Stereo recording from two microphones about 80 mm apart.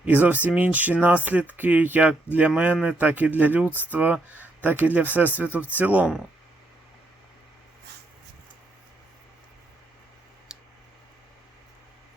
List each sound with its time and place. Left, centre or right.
0.0 s speech: right
10.5 s clicking: centre